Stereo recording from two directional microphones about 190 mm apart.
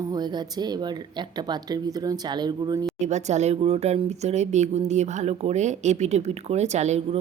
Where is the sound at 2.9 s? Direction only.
40° right (ahead or behind).